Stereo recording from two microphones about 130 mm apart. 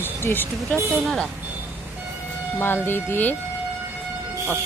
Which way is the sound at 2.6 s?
15° left (ahead or behind).